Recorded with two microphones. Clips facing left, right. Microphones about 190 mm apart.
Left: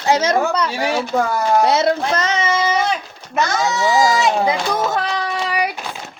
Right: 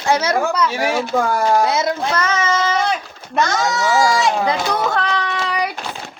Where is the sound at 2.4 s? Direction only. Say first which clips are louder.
Even; 15° left (ahead or behind).